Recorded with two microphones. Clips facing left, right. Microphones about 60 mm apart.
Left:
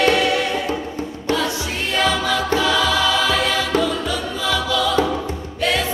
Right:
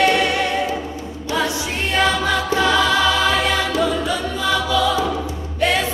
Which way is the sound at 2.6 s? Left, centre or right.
Right.